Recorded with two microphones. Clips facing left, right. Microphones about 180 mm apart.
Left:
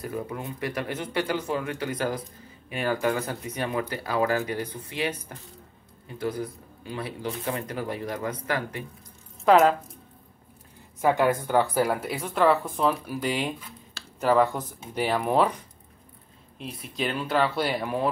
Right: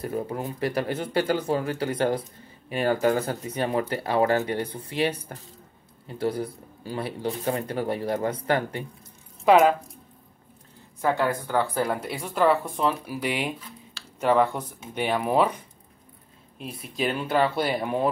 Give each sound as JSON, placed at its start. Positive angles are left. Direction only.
{"t": 0.0, "sound": "speech", "side_deg": -30}
{"t": 9.4, "sound": "speech", "side_deg": 0}
{"t": 11.0, "sound": "speech", "side_deg": 15}
{"t": 16.9, "sound": "speech", "side_deg": -5}
{"t": 17.7, "sound": "speech", "side_deg": -20}